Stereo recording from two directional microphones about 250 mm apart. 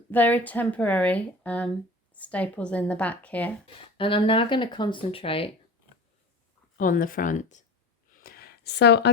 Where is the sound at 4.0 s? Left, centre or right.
Left.